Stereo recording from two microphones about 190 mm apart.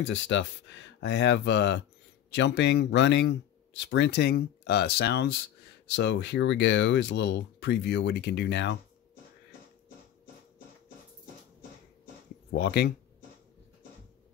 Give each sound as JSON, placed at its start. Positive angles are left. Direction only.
{"t": 0.0, "sound": "speech", "side_deg": 75}
{"t": 12.4, "sound": "speech", "side_deg": 60}